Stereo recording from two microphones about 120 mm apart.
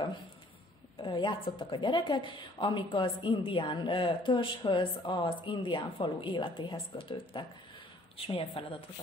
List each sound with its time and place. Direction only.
0.9 s speech: 40° left (ahead or behind)